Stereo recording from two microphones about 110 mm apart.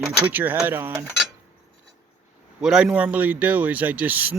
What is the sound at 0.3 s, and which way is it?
Speech, 15° right (ahead or behind).